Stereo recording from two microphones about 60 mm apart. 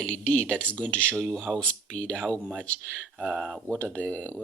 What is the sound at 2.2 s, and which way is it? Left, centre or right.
Speech, right.